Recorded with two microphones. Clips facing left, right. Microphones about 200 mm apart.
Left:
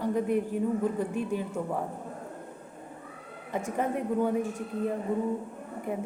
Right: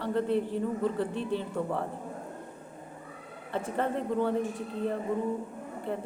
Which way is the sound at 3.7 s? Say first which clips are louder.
Left 1 dB; 10° left (ahead or behind).